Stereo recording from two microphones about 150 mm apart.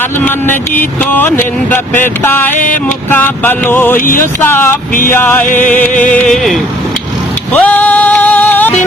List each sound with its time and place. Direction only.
0.3 s a sound: 15° left (ahead or behind)
4.0 s speech: 65° left (ahead or behind)
4.4 s a sound: 15° left (ahead or behind)
5.9 s speech: 60° left (ahead or behind)
6.1 s speech: centre (ahead or behind)
7.5 s music: 10° left (ahead or behind)